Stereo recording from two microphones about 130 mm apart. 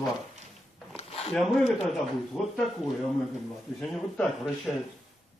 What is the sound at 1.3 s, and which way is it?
Speech, centre (ahead or behind).